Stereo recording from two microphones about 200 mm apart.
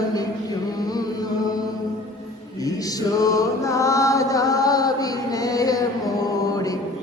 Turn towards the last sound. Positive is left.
turn(degrees=20)  # may be behind; listen again after turning